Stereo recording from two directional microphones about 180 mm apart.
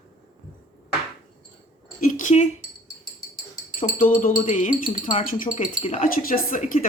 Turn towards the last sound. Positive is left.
turn(degrees=50)  # may be behind; listen again after turning